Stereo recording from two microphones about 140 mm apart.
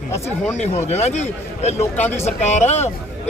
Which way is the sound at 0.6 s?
55° left (ahead or behind).